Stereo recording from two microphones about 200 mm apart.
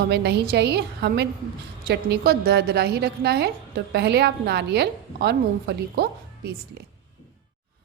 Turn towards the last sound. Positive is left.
turn(degrees=-55)  # may be behind; listen again after turning